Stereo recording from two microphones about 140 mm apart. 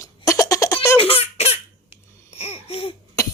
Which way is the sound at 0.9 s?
45° left (ahead or behind).